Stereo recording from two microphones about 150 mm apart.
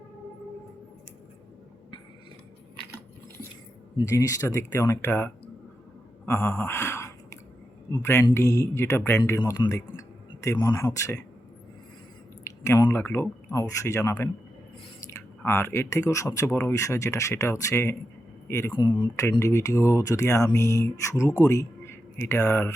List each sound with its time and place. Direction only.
3.9 s speech: 25° left (ahead or behind)
6.2 s a sound: 15° left (ahead or behind)
7.9 s speech: 20° left (ahead or behind)
12.5 s speech: 20° left (ahead or behind)
15.4 s speech: 15° left (ahead or behind)
18.8 s speech: 30° left (ahead or behind)
19.2 s speech: 20° left (ahead or behind)